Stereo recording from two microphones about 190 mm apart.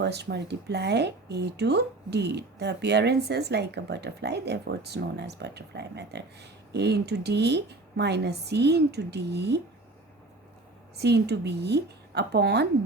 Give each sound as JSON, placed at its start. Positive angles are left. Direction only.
{"t": 0.0, "sound": "speech", "side_deg": -60}
{"t": 10.9, "sound": "speech", "side_deg": -60}